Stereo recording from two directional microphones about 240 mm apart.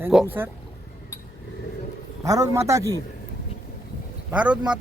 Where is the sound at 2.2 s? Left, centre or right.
Centre.